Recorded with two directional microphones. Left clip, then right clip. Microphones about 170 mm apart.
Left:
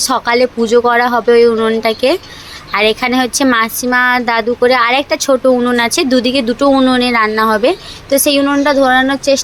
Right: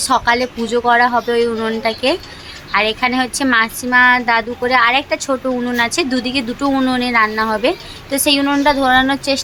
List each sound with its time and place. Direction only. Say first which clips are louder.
0.0 s speech: left 3 dB; 20° left (ahead or behind)